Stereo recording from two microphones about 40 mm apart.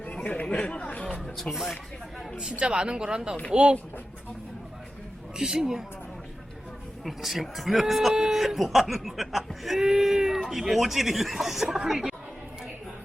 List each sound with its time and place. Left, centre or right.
0.0 s chatter: left
0.4 s speech: left
0.7 s speech: left
1.5 s speech: centre
2.4 s speech: right
5.4 s speech: centre
7.0 s speech: centre